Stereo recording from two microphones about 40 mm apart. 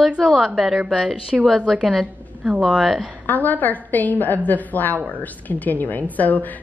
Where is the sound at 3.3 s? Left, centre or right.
Left.